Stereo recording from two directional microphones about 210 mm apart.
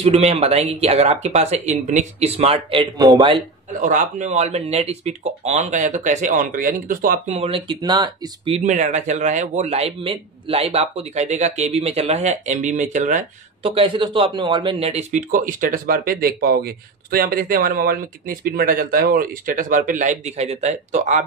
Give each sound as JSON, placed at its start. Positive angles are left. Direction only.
{"t": 0.0, "sound": "speech", "side_deg": -30}
{"t": 3.8, "sound": "a man's voice", "side_deg": -35}
{"t": 7.3, "sound": "speech", "side_deg": -25}
{"t": 8.5, "sound": "a man's voice", "side_deg": -35}